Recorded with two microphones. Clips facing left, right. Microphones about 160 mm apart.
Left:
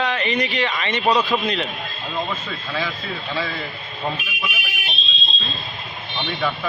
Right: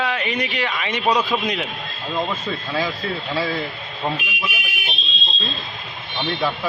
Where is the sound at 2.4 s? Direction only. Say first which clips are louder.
Right 3 dB; 40° right (ahead or behind).